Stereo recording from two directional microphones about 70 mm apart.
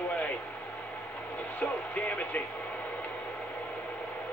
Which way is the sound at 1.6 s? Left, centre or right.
Left.